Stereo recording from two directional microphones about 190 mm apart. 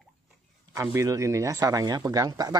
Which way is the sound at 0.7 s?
15° right (ahead or behind).